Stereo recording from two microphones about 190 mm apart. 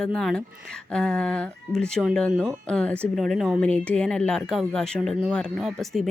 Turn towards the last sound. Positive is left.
turn(degrees=0)  # may be behind; listen again after turning